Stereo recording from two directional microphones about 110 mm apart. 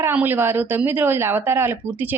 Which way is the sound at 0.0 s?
15° right (ahead or behind).